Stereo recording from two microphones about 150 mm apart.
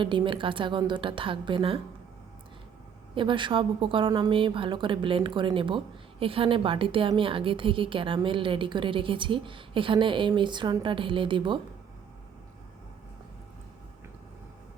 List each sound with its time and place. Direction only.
0.0 s a woman's voice: 30° right (ahead or behind)
3.2 s a woman's voice: 35° right (ahead or behind)